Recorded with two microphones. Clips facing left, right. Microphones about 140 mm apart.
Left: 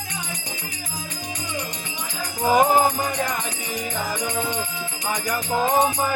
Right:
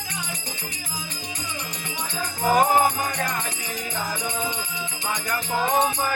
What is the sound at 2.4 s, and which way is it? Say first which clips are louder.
Music: left 2 dB; 20° left (ahead or behind).